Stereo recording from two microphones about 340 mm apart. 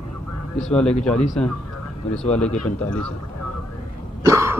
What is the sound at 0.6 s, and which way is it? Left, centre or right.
Speech, centre.